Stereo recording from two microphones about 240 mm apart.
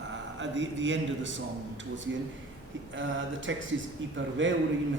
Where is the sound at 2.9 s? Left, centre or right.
Right.